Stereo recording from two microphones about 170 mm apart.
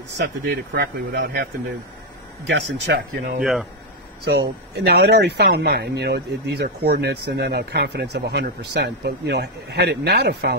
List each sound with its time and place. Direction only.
0.2 s speech: 65° right (ahead or behind)
2.4 s speech: 90° right
3.3 s speech: centre (ahead or behind)
4.7 s speech: 75° right (ahead or behind)